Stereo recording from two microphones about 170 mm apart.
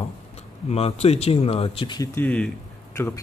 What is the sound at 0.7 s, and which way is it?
Speech, 35° left (ahead or behind).